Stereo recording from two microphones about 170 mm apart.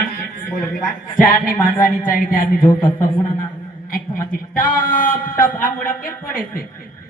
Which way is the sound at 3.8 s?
55° left (ahead or behind).